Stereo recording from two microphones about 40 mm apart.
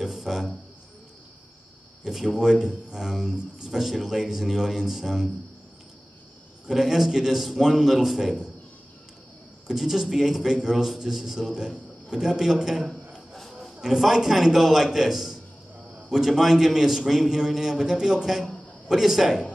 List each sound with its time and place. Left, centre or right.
0.0 s a sound: centre
2.0 s a man's voice: centre
3.8 s a man's voice: centre
6.7 s a man's voice: centre
9.7 s a man's voice: centre
11.5 s a man's voice: centre
13.3 s music: centre
13.7 s a man's voice: centre